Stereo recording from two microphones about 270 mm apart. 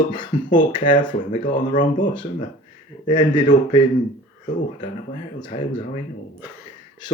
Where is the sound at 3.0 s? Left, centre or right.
Centre.